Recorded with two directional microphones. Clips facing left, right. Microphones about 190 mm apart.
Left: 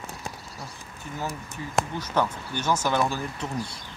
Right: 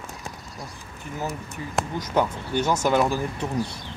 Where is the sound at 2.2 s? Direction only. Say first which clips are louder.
Right 4 dB; 15° right (ahead or behind).